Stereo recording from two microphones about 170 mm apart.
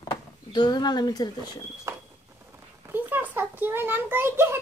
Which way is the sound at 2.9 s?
10° right (ahead or behind).